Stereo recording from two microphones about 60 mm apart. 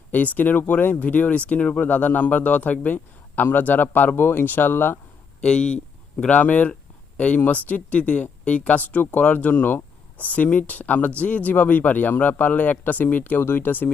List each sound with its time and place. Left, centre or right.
0.1 s speech: left
5.4 s speech: centre; by 13.9 s left